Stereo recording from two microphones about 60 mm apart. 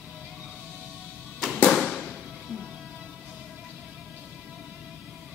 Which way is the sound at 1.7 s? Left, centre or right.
Centre.